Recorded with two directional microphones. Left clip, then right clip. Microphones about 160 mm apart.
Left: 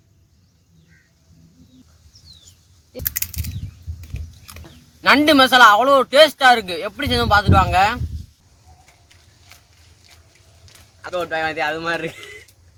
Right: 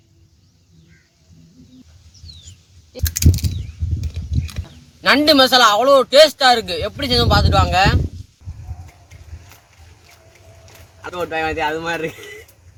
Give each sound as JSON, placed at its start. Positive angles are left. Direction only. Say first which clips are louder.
{"t": 3.2, "sound": "a sound", "louder": "right 10 dB", "side_deg": 5}
{"t": 5.0, "sound": "speech", "louder": "even", "side_deg": 0}
{"t": 11.0, "sound": "speech", "louder": "even", "side_deg": 25}